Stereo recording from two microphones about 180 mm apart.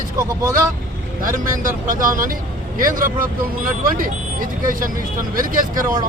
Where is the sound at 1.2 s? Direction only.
50° right (ahead or behind).